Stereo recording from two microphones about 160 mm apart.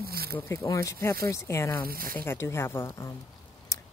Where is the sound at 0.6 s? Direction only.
20° left (ahead or behind).